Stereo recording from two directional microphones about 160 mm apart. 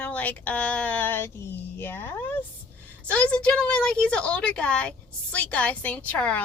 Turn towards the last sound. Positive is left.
turn(degrees=10)  # may be behind; listen again after turning